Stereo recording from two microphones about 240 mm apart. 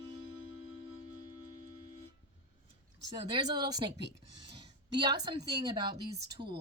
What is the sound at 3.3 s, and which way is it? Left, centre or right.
A woman's voice, centre.